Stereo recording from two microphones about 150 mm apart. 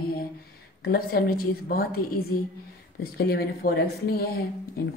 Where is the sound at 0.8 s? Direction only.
90° left.